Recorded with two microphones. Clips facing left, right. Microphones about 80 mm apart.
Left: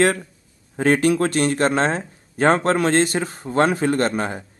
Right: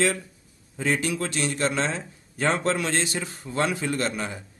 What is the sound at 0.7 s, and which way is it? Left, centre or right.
A man's voice, left.